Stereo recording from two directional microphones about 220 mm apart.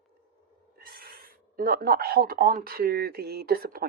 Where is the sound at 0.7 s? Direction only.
45° right (ahead or behind).